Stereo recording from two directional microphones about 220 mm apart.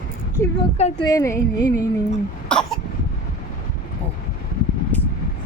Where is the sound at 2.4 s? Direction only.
5° left (ahead or behind).